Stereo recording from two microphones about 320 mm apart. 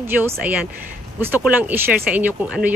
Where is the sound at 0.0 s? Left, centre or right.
Centre.